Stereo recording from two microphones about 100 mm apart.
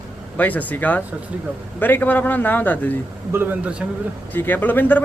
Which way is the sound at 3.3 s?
25° right (ahead or behind).